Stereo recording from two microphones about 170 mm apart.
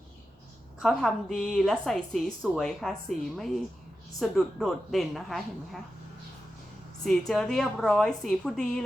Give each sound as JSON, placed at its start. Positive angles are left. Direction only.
{"t": 0.8, "sound": "a woman's voice", "side_deg": 0}
{"t": 7.0, "sound": "a woman's voice", "side_deg": 5}